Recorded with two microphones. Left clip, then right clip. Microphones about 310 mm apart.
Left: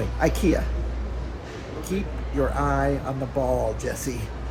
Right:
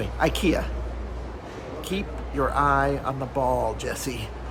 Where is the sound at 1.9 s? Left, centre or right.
Right.